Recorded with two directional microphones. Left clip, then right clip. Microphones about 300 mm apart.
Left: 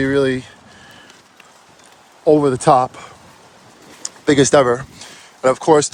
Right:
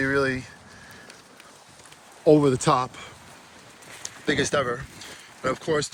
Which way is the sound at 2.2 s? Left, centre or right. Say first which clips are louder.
Left 6 dB; centre.